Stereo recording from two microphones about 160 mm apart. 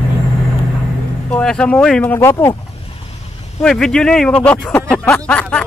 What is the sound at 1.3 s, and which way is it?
Speech, 5° left (ahead or behind).